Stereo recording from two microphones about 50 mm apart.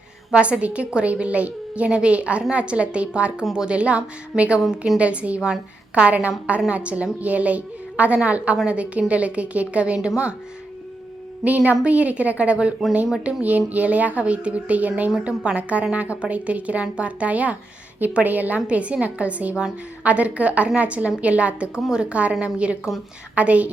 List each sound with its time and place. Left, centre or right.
0.3 s a woman's voice: right
11.4 s a woman's voice: right